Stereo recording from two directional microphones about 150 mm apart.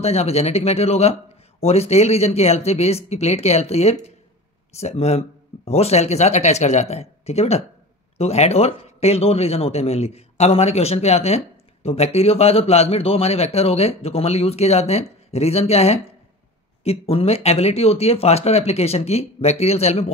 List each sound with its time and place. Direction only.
0.0 s speech: 45° left (ahead or behind)